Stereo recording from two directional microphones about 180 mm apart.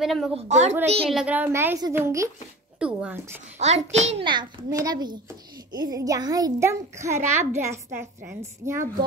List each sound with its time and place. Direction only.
0.0 s a woman's voice: centre (ahead or behind)
0.5 s a woman's voice: 40° right (ahead or behind)
1.1 s a woman's voice: 10° right (ahead or behind)
3.5 s a child's voice: 40° right (ahead or behind); by 8.8 s 15° right (ahead or behind)